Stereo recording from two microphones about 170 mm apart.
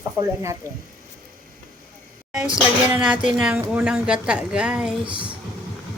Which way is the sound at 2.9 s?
5° right (ahead or behind).